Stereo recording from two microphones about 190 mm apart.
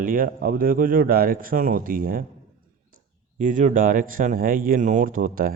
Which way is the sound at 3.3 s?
40° right (ahead or behind).